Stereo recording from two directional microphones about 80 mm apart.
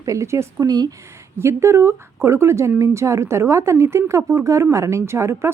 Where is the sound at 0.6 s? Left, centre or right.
Right.